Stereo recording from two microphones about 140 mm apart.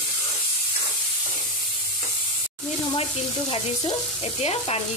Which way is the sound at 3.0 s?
45° left (ahead or behind).